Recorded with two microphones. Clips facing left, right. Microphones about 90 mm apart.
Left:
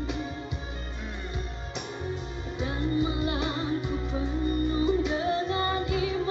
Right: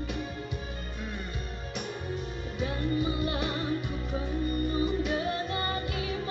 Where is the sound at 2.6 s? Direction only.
25° left (ahead or behind).